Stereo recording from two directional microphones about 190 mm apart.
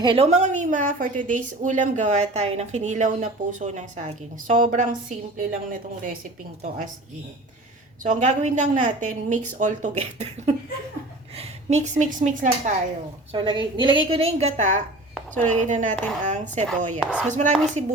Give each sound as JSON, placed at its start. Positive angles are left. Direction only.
{"t": 0.0, "sound": "a woman's voice", "side_deg": -30}
{"t": 6.6, "sound": "a woman's voice", "side_deg": -45}
{"t": 8.0, "sound": "a woman's voice", "side_deg": -40}
{"t": 13.3, "sound": "a woman's voice", "side_deg": -25}
{"t": 17.0, "sound": "speech", "side_deg": -5}
{"t": 17.2, "sound": "a woman's voice", "side_deg": -40}